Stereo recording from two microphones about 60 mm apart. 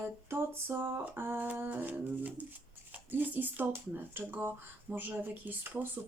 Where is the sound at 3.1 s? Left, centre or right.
Right.